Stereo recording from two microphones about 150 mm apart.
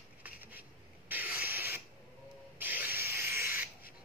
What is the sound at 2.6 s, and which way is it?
Rub, 10° right (ahead or behind).